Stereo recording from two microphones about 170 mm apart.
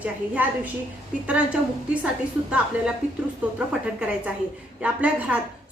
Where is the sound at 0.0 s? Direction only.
10° right (ahead or behind).